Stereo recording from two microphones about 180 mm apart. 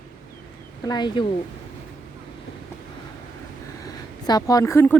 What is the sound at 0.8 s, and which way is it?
Speech, 25° left (ahead or behind).